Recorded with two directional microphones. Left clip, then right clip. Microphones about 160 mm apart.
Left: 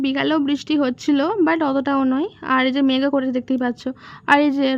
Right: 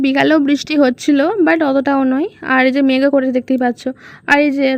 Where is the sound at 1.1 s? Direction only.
20° right (ahead or behind).